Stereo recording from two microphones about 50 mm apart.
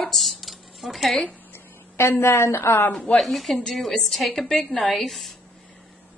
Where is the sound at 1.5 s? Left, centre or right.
Left.